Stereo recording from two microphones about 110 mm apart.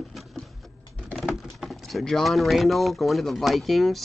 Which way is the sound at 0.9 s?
15° left (ahead or behind).